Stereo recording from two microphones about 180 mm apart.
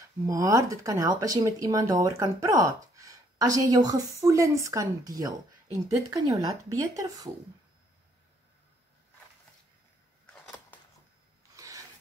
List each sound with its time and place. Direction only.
0.3 s speech: 20° right (ahead or behind)
10.3 s a sound: 5° left (ahead or behind)
11.5 s rub: 20° right (ahead or behind)